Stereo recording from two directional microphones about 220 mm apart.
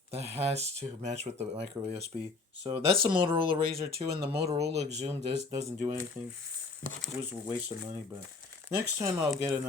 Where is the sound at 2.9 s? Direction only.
20° right (ahead or behind).